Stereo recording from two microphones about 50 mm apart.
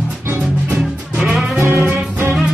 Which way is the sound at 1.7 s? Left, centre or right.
Right.